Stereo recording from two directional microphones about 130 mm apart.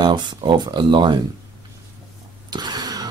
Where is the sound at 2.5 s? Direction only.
30° right (ahead or behind).